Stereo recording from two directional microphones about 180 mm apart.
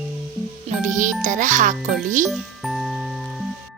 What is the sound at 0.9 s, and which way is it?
A child's voice, 45° right (ahead or behind).